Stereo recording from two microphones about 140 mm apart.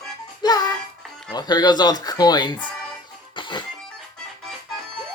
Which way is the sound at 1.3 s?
30° left (ahead or behind).